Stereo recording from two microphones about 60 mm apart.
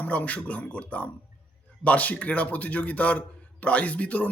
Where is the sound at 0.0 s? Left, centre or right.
Left.